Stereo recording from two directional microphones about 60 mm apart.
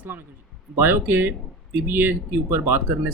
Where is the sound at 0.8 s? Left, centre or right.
Right.